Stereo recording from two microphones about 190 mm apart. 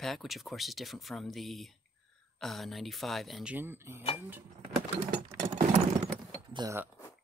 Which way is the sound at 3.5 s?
10° right (ahead or behind).